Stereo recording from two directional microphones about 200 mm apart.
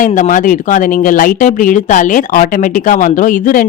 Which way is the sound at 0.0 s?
40° left (ahead or behind).